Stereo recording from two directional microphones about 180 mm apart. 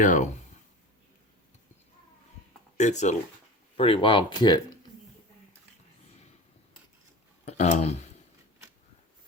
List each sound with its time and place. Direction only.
0.0 s speech: 45° left (ahead or behind)
2.7 s speech: 40° left (ahead or behind); by 4.6 s 25° left (ahead or behind)
7.4 s speech: 40° left (ahead or behind)